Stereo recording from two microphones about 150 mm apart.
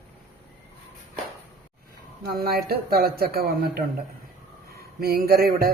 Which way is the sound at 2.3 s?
90° right.